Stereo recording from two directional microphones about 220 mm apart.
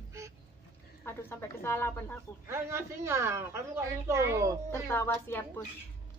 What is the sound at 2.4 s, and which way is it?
A woman's voice, 10° right (ahead or behind).